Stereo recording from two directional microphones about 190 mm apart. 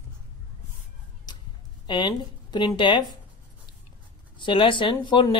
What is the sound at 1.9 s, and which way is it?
Speech, 25° left (ahead or behind).